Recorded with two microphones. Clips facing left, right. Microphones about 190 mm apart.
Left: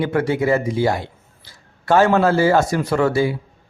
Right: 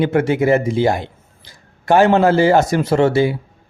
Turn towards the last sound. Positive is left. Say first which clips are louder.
# right 3 dB
turn(degrees=-25)  # may be behind; listen again after turning